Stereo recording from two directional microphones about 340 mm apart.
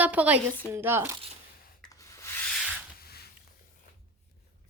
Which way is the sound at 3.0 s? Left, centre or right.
Left.